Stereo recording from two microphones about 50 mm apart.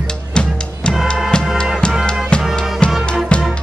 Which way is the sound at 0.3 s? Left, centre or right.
Centre.